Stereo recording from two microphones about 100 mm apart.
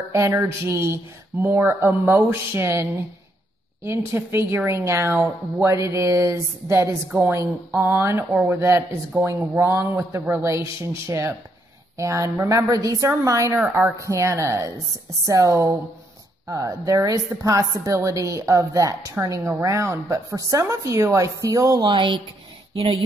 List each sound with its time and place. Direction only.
0.1 s a woman's voice: 30° right (ahead or behind)
21.8 s speech: 50° right (ahead or behind)
22.8 s speech: 85° right